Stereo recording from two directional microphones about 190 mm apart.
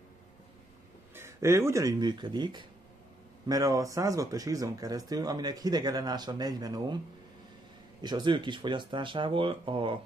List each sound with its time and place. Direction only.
1.1 s speech: 15° right (ahead or behind)
8.0 s speech: 25° right (ahead or behind)